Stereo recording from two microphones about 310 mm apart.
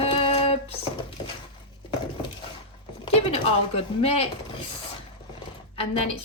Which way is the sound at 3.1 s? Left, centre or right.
Centre.